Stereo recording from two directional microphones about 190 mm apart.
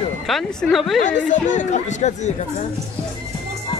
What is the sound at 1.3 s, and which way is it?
Speech, 40° left (ahead or behind).